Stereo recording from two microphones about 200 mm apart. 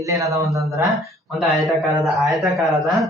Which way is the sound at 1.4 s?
Centre (ahead or behind).